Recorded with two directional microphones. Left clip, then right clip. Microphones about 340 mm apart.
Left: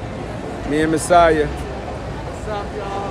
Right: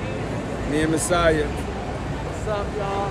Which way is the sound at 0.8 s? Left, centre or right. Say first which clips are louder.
Left 8 dB; centre.